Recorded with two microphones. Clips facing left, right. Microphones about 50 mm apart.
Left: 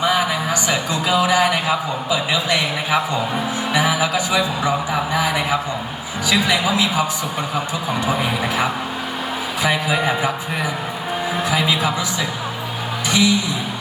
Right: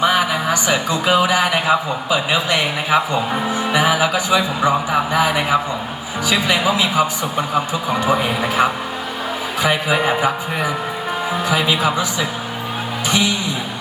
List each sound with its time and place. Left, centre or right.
0.0 s speech: right
13.1 s speech: right